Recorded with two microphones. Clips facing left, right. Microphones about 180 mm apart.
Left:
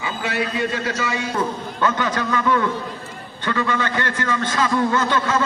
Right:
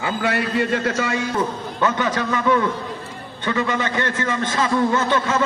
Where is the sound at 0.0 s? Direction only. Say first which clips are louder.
Right 3 dB; 60° right (ahead or behind).